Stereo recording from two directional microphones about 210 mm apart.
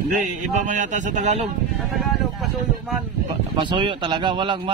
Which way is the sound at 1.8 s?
Centre (ahead or behind).